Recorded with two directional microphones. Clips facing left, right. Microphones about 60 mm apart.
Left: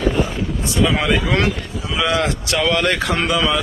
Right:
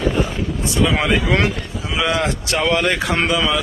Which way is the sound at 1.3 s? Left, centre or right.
Centre.